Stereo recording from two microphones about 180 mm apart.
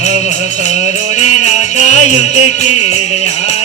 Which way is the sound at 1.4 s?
40° left (ahead or behind).